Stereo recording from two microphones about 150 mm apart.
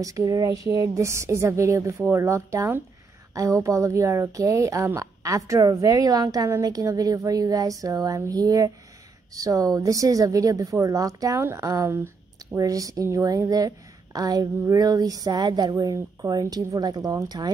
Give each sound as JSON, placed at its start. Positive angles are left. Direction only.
{"t": 0.0, "sound": "speech", "side_deg": -25}